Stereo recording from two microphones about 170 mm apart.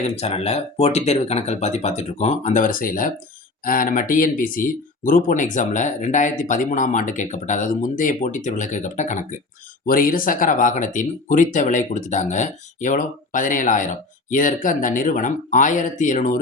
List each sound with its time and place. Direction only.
0.0 s speech: 40° left (ahead or behind)